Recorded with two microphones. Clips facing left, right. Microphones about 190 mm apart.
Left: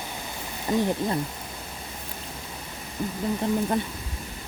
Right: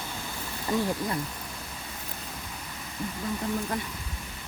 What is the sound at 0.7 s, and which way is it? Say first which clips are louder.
Speech: left 4 dB; 20° left (ahead or behind).